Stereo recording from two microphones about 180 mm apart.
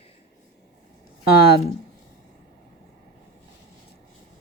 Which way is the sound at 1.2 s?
60° left (ahead or behind).